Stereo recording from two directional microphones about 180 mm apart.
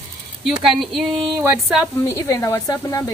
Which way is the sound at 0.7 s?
Centre (ahead or behind).